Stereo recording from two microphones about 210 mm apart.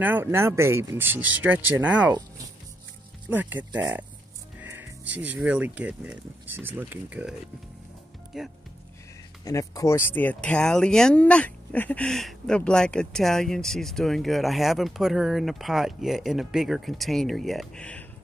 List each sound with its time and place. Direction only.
0.0 s speech: 10° right (ahead or behind)
3.3 s speech: 10° right (ahead or behind)
9.4 s speech: 15° left (ahead or behind)